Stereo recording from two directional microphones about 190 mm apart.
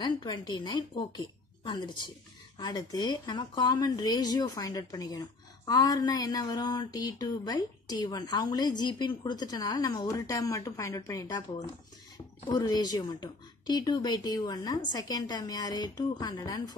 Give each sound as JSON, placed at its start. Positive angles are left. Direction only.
{"t": 0.0, "sound": "a woman's voice", "side_deg": 25}
{"t": 12.4, "sound": "speech", "side_deg": 20}